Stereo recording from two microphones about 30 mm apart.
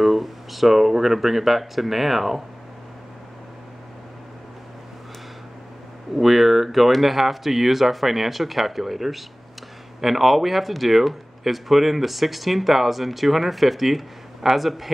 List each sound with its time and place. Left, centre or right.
0.0 s speech: centre
6.1 s speech: centre